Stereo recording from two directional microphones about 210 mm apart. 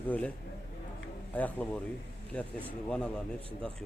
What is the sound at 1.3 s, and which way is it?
Speech, 5° left (ahead or behind).